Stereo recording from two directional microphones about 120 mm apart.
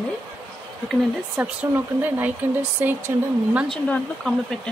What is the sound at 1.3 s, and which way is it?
Speech, 15° right (ahead or behind).